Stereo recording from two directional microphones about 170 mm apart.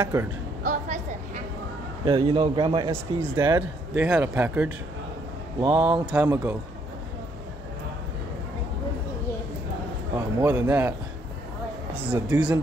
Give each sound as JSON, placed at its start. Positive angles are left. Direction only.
{"t": 0.7, "sound": "a sound", "side_deg": -45}
{"t": 2.0, "sound": "a man's voice", "side_deg": -30}
{"t": 2.9, "sound": "speech", "side_deg": -15}
{"t": 5.6, "sound": "a man's voice", "side_deg": -25}
{"t": 6.1, "sound": "speech", "side_deg": -15}
{"t": 10.1, "sound": "speech", "side_deg": -15}